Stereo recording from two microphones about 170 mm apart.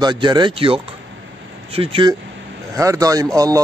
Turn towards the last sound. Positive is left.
turn(degrees=-20)  # may be behind; listen again after turning